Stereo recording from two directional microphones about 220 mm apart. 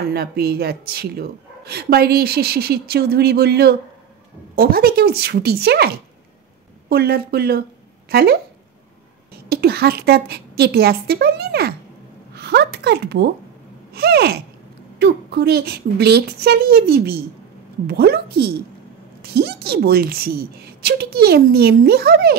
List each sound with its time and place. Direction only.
0.1 s a woman's voice: 45° right (ahead or behind)
6.9 s a woman's voice: 45° right (ahead or behind)
9.5 s a woman's voice: 45° right (ahead or behind)